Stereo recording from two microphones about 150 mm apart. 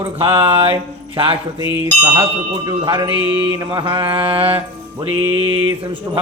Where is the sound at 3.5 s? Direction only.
30° right (ahead or behind).